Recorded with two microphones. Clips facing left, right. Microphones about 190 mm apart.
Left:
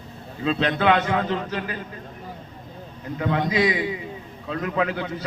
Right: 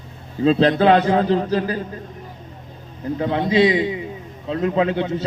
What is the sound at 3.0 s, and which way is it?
A man's voice, 30° right (ahead or behind).